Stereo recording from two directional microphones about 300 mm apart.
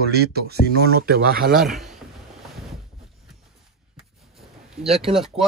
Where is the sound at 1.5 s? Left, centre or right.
Centre.